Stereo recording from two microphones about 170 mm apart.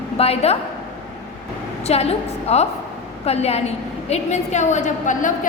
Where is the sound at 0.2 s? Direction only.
35° left (ahead or behind).